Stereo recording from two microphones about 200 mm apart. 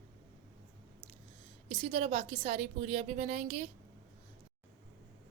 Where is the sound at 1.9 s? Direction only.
30° right (ahead or behind).